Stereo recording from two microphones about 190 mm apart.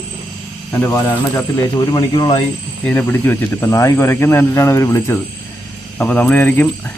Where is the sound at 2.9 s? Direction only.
10° left (ahead or behind).